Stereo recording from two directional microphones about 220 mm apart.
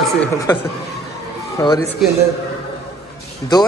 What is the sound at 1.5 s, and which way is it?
Speech, 15° left (ahead or behind).